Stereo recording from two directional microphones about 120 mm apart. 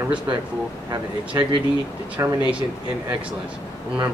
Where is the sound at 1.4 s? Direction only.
25° right (ahead or behind).